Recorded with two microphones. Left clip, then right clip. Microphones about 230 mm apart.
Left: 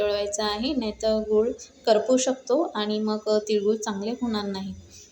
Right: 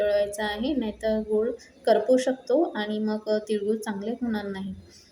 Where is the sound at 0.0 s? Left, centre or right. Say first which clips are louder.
Right 1 dB; left.